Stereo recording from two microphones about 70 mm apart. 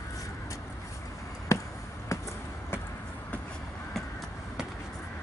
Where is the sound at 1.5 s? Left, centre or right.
Left.